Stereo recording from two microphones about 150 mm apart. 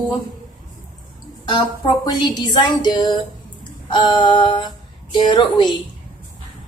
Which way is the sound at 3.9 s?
30° left (ahead or behind).